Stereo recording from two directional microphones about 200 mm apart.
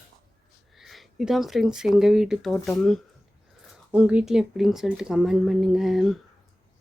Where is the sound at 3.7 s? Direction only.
5° right (ahead or behind).